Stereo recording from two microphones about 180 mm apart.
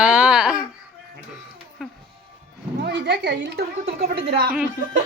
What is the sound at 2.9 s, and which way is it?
A woman's voice, 75° right (ahead or behind).